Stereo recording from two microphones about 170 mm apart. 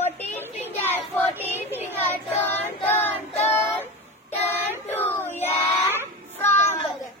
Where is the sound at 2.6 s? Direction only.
15° left (ahead or behind).